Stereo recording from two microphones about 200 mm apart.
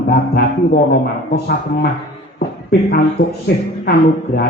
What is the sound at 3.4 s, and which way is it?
A woman's voice, 50° left (ahead or behind).